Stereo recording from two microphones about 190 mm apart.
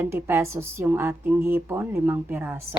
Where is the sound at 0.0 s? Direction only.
10° right (ahead or behind).